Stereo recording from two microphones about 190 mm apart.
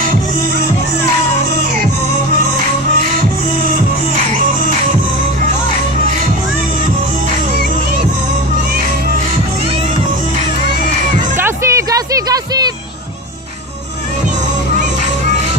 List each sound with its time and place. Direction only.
11.3 s music: 15° right (ahead or behind)